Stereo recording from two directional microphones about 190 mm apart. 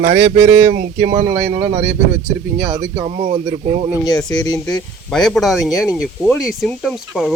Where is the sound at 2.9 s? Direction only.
20° right (ahead or behind).